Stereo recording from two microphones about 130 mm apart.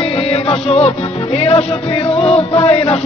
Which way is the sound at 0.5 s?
50° left (ahead or behind).